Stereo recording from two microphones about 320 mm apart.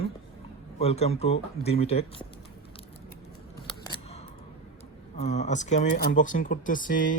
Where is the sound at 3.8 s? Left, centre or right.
Centre.